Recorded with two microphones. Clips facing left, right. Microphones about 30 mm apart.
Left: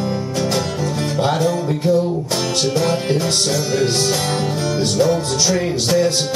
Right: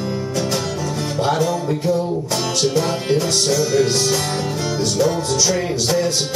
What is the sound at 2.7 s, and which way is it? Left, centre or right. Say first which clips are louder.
Music: left 1 dB; centre.